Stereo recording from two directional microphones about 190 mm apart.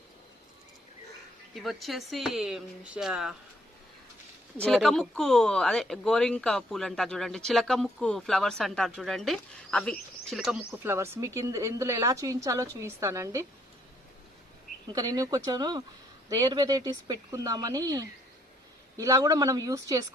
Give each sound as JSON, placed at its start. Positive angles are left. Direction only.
{"t": 1.5, "sound": "speech", "side_deg": 0}
{"t": 4.6, "sound": "speech", "side_deg": 5}
{"t": 10.8, "sound": "a woman's voice", "side_deg": -15}
{"t": 14.9, "sound": "speech", "side_deg": -20}